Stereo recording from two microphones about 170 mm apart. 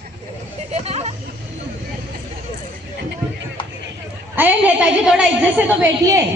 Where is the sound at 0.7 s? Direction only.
40° right (ahead or behind).